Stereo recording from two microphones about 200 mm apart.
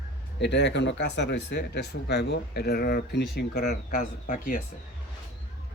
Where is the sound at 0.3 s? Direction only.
60° left (ahead or behind); by 4.6 s 40° left (ahead or behind).